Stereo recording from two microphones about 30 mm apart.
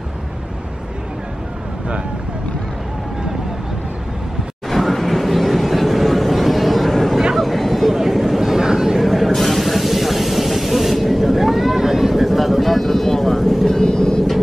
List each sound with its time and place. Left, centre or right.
4.6 s vehicle: centre
7.3 s a sound: centre
9.0 s vehicle: centre
13.7 s vehicle: left